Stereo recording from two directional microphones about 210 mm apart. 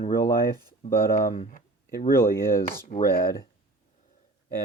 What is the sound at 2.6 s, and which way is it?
Speech, 45° left (ahead or behind).